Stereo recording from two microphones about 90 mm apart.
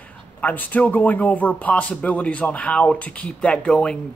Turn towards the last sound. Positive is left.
turn(degrees=10)  # may be behind; listen again after turning